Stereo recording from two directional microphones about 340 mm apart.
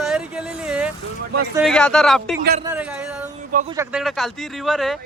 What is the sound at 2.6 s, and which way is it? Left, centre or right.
Speech, centre.